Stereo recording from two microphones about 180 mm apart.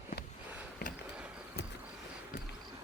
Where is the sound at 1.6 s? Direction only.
60° left (ahead or behind).